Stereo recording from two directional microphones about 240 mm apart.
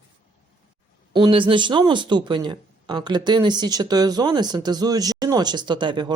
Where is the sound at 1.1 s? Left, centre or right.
Right.